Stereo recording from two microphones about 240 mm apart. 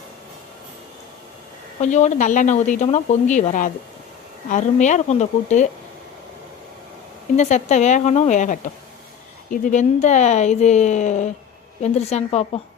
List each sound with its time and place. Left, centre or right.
1.8 s speech: left
7.3 s speech: left